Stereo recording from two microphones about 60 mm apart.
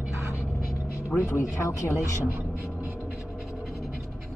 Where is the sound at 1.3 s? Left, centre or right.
Left.